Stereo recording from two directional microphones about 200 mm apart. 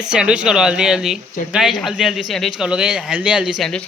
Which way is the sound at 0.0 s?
5° right (ahead or behind).